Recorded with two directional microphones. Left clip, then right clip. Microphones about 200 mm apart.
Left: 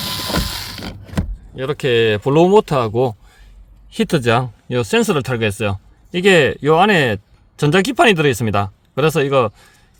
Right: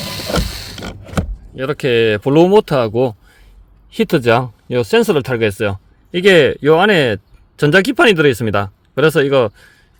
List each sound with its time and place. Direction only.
0.0 s mechanisms: 30° left (ahead or behind)
0.4 s a sound: 30° left (ahead or behind)
1.5 s speech: 10° right (ahead or behind)